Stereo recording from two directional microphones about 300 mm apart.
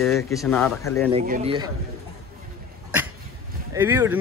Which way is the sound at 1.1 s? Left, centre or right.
Right.